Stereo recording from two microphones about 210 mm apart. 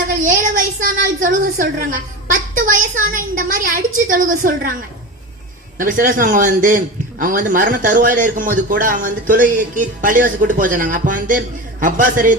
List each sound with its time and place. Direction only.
0.3 s child singing: 40° right (ahead or behind)
2.3 s a woman's voice: 40° right (ahead or behind)
5.7 s a man's voice: 40° right (ahead or behind)